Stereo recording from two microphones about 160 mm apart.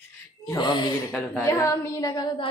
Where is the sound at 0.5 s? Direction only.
30° left (ahead or behind).